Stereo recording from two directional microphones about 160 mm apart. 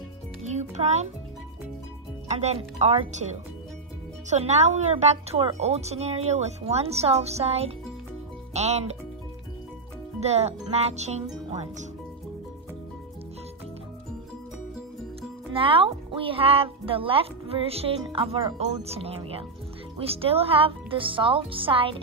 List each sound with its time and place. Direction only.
0.4 s music: 45° right (ahead or behind)
2.2 s speech: 45° right (ahead or behind)
4.3 s speech: 45° right (ahead or behind)
10.2 s speech: 40° right (ahead or behind)
15.5 s speech: 35° right (ahead or behind)